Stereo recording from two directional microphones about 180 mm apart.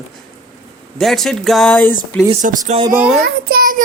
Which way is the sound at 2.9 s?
5° right (ahead or behind).